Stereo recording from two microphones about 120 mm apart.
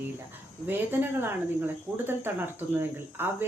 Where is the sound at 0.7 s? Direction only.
15° right (ahead or behind).